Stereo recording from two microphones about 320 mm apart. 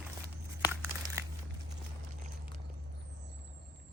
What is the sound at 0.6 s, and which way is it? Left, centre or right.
Crumpling, centre.